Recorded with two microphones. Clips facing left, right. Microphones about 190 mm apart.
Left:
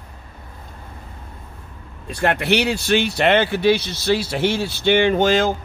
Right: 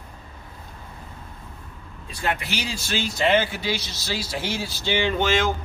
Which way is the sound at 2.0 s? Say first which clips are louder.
Left 7 dB; 65° left (ahead or behind).